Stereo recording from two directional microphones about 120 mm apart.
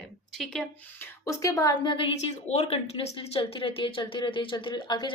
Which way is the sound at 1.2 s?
25° left (ahead or behind).